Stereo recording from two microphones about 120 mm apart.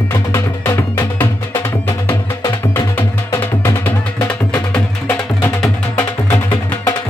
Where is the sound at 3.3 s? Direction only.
20° left (ahead or behind).